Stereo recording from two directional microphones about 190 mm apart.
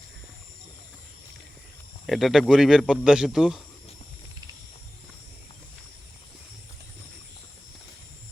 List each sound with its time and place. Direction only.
2.0 s speech: centre (ahead or behind)